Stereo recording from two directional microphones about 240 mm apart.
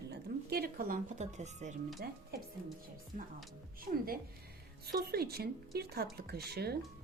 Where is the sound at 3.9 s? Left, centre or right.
Right.